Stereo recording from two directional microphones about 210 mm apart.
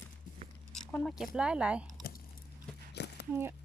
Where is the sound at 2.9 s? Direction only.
50° left (ahead or behind).